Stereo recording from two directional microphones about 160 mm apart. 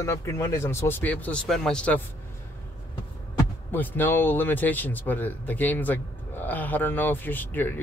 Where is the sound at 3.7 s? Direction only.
10° left (ahead or behind).